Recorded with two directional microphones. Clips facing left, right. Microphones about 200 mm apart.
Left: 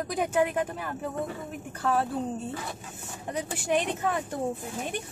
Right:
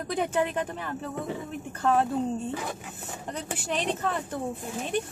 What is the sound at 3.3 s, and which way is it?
Speech, 15° left (ahead or behind).